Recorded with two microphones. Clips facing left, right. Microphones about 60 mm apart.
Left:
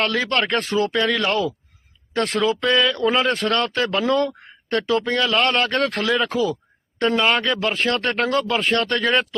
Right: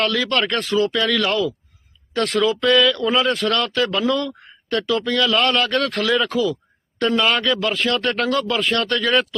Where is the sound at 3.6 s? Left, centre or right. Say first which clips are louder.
Right 1 dB; left.